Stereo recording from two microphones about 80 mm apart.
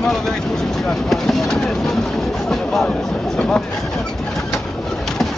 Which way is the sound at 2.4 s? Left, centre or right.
Centre.